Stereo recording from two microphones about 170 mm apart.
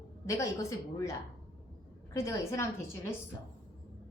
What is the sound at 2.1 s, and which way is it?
Speech, 15° left (ahead or behind).